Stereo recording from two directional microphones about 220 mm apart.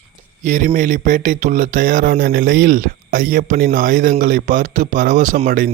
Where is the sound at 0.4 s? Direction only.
35° right (ahead or behind).